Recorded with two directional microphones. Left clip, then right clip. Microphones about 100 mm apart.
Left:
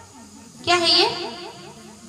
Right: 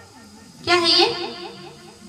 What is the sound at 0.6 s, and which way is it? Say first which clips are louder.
Speech: right 1 dB; 15° left (ahead or behind).